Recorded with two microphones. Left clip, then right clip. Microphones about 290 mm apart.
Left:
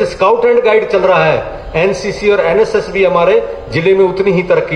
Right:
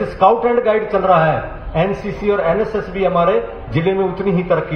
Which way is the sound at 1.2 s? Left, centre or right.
Centre.